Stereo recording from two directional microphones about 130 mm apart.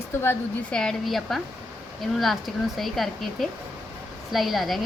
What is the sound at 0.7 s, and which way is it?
Speech, 5° left (ahead or behind).